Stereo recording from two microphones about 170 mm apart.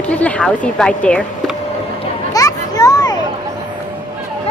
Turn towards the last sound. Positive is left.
turn(degrees=20)  # may be behind; listen again after turning